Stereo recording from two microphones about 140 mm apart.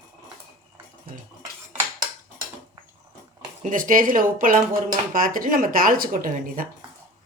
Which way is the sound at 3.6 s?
75° right (ahead or behind).